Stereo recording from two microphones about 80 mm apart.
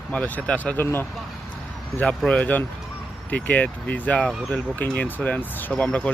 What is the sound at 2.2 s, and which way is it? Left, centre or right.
Speech, centre.